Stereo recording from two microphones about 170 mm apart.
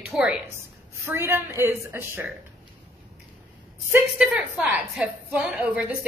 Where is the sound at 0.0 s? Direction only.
5° right (ahead or behind).